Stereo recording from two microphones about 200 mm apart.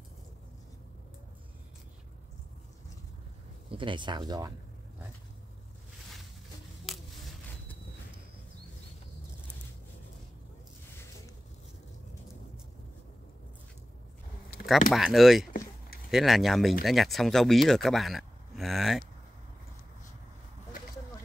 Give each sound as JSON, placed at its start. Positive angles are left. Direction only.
{"t": 3.7, "sound": "speech", "side_deg": -25}
{"t": 6.9, "sound": "a sound", "side_deg": 0}
{"t": 14.9, "sound": "speech", "side_deg": 0}